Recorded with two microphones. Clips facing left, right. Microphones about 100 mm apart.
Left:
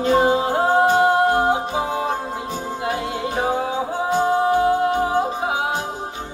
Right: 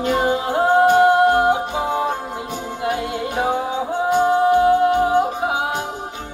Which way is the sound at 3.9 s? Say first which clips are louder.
Right 4 dB; 20° right (ahead or behind).